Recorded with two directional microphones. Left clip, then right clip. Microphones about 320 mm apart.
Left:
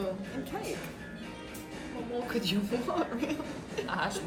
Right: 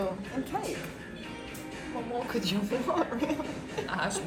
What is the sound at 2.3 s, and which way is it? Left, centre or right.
A woman's voice, centre.